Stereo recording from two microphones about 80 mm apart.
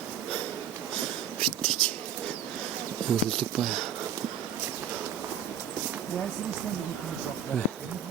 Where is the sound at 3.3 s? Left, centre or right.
Centre.